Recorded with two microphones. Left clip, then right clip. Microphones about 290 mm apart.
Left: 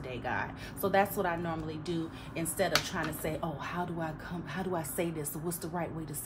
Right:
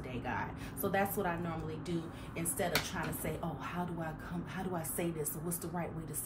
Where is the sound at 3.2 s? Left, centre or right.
Left.